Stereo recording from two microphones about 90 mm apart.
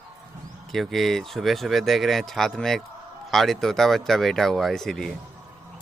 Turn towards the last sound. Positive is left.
turn(degrees=5)  # may be behind; listen again after turning